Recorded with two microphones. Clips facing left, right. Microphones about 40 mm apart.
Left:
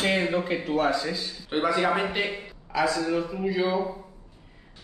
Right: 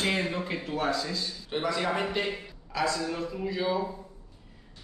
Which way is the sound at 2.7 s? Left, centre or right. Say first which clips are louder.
Left 5 dB; centre.